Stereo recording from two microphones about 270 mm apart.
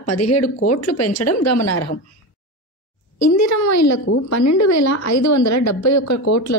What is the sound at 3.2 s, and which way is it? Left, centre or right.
A woman's voice, left.